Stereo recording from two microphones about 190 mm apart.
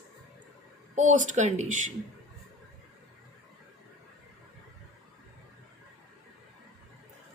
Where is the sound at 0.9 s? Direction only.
40° right (ahead or behind).